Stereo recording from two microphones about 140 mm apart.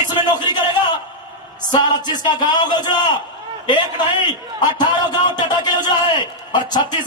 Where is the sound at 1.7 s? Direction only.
30° left (ahead or behind).